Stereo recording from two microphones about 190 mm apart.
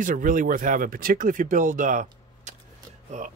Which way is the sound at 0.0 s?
45° right (ahead or behind).